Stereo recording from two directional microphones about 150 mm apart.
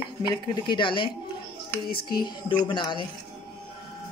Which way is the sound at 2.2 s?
30° left (ahead or behind).